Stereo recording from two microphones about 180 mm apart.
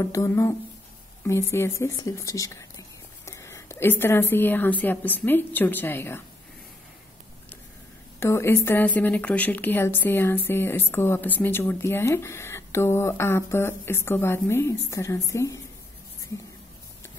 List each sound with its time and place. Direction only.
0.0 s speech: 15° left (ahead or behind)
8.2 s speech: 15° left (ahead or behind)